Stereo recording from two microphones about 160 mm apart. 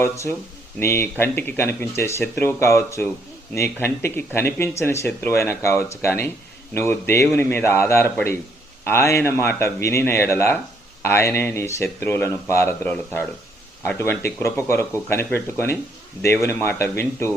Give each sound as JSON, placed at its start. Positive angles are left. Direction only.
{"t": 0.0, "sound": "speech", "side_deg": 15}